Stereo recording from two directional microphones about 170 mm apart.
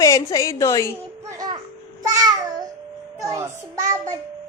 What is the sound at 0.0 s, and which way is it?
Speech, 20° left (ahead or behind).